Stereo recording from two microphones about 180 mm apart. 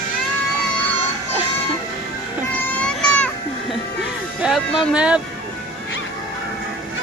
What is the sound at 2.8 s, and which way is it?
Baby cry, 5° left (ahead or behind).